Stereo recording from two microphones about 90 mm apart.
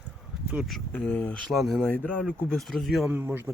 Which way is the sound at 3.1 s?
20° right (ahead or behind).